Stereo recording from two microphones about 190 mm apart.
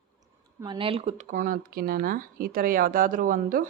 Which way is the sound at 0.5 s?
25° right (ahead or behind).